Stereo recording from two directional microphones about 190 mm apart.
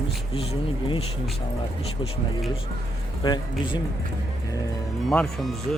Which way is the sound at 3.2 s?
20° left (ahead or behind).